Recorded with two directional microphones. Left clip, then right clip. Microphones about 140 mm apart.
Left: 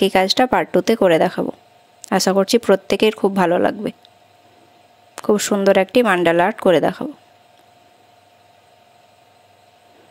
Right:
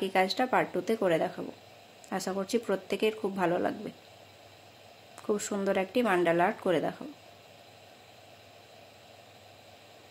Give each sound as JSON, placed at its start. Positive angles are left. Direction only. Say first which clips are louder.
{"t": 0.2, "sound": "speech", "louder": "left 11 dB", "side_deg": 90}
{"t": 5.1, "sound": "speech", "louder": "left 14 dB", "side_deg": 90}